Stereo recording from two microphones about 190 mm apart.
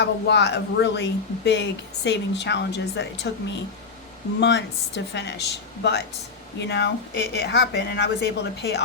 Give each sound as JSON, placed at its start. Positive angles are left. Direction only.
{"t": 0.0, "sound": "speech", "side_deg": 65}